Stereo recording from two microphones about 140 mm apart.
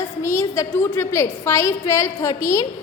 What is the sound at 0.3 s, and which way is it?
A woman's voice, 20° left (ahead or behind).